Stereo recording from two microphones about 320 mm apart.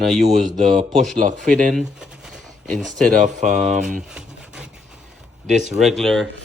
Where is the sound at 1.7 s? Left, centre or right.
Centre.